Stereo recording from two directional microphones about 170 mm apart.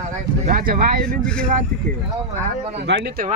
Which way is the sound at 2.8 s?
80° right.